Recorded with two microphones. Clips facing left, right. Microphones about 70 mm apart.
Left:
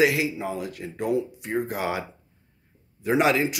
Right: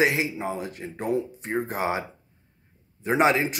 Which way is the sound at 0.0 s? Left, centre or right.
Right.